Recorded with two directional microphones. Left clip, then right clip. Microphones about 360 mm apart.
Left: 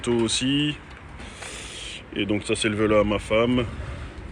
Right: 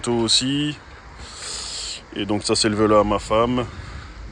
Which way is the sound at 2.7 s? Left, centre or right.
Centre.